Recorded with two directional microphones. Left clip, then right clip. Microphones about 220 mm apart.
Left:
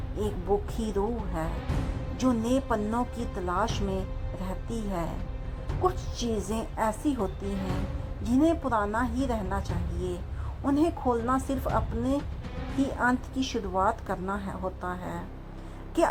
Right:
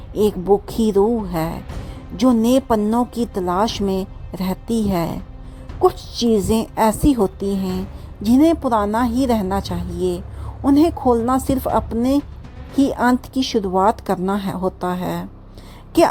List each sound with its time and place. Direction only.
0.2 s a woman's voice: 45° right (ahead or behind)